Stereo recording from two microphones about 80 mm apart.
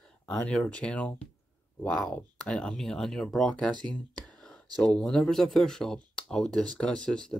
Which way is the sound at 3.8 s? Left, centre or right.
Centre.